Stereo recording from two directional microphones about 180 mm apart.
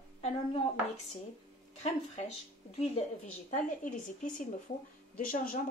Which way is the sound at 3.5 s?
45° left (ahead or behind).